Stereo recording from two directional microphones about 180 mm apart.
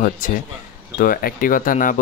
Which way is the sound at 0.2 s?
50° left (ahead or behind).